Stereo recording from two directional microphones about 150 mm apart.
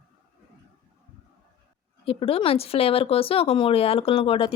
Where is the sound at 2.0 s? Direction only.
40° left (ahead or behind).